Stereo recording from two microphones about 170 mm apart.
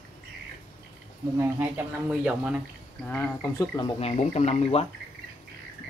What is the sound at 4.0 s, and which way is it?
Speech, 40° left (ahead or behind).